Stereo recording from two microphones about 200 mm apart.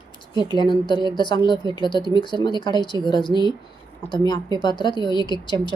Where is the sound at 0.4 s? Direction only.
20° left (ahead or behind).